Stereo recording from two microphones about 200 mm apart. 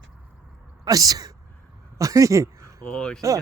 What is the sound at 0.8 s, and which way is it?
Speech, 20° right (ahead or behind).